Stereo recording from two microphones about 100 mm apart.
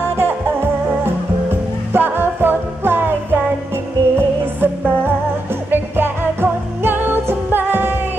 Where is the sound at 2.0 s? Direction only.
20° right (ahead or behind).